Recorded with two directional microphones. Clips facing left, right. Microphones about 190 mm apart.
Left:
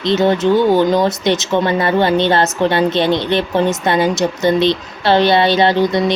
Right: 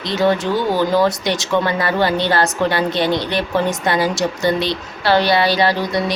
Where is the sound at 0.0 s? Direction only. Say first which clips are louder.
Left 4 dB; 20° left (ahead or behind).